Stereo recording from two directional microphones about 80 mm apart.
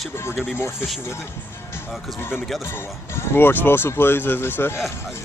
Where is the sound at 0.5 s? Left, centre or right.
Left.